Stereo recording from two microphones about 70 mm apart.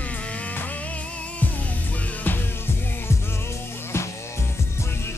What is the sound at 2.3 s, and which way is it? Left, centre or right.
Music, left.